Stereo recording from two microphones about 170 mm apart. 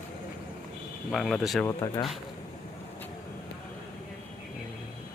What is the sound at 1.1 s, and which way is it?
Speech, centre (ahead or behind).